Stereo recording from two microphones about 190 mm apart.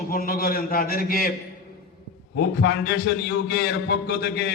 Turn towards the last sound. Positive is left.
turn(degrees=60)  # may be behind; listen again after turning